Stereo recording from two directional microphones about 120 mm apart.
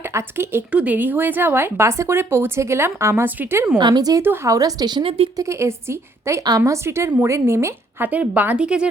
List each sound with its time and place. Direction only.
0.0 s speech: 20° right (ahead or behind)
3.8 s speech: 35° right (ahead or behind)
4.2 s speech: 25° right (ahead or behind); by 5.1 s 40° right (ahead or behind)
5.4 s a woman's voice: 25° right (ahead or behind); by 8.9 s 10° right (ahead or behind)